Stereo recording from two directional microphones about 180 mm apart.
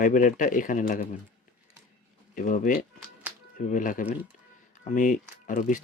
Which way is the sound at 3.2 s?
10° right (ahead or behind).